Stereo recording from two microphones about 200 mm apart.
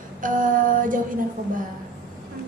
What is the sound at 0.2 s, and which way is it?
Female singing, 40° right (ahead or behind).